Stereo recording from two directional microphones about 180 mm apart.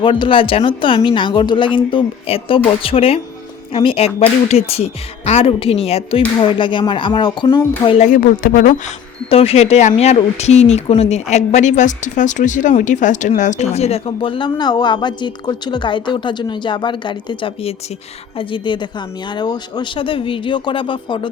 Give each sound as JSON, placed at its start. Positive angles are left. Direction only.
{"t": 0.0, "sound": "a woman's voice", "side_deg": 30}
{"t": 7.9, "sound": "speech", "side_deg": 45}
{"t": 9.3, "sound": "a woman's voice", "side_deg": 35}